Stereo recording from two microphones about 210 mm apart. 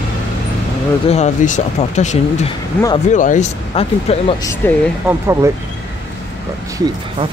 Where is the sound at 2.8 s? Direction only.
10° left (ahead or behind).